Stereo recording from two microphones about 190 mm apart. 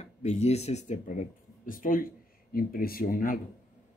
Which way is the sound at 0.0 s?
35° left (ahead or behind).